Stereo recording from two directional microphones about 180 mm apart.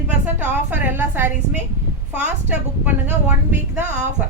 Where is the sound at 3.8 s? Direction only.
40° right (ahead or behind).